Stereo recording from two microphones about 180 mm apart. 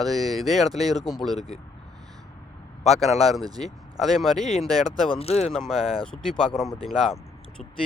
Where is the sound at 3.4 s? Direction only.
20° right (ahead or behind).